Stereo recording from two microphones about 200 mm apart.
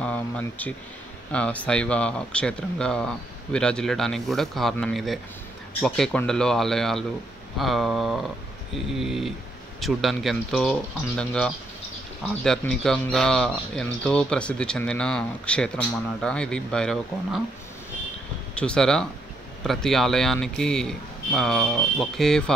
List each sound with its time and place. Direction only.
0.0 s a sound: 10° left (ahead or behind)
1.3 s speech: 5° left (ahead or behind)
18.5 s speech: 5° left (ahead or behind)